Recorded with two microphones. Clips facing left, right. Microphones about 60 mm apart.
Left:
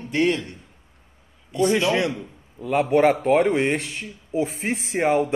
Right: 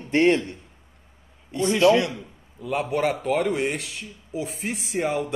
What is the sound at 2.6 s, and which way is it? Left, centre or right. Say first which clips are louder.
Speech: left 6 dB; left.